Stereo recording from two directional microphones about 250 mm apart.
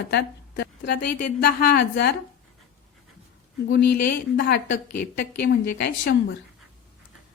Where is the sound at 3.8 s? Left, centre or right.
Left.